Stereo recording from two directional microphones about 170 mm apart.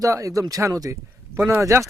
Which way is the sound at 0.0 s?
20° right (ahead or behind).